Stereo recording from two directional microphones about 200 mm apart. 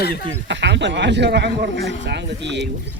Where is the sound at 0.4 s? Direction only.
60° right (ahead or behind).